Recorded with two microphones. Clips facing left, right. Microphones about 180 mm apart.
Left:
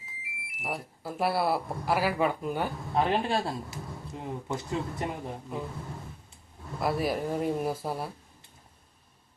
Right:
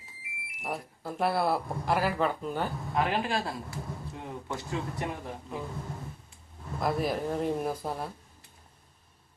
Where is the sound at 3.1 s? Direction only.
25° left (ahead or behind).